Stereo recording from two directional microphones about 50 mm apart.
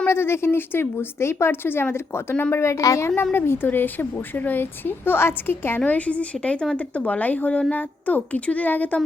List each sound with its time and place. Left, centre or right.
0.1 s a woman's voice: left
2.5 s a woman's voice: left
3.3 s a woman's voice: left
5.8 s a woman's voice: left